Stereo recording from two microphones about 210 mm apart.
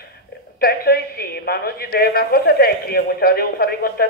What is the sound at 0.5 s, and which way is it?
A woman's voice, 45° left (ahead or behind).